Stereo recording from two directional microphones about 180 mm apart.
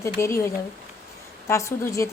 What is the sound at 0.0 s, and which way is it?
A woman's voice, 15° left (ahead or behind).